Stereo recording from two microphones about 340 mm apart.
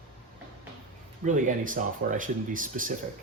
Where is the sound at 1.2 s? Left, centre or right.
Right.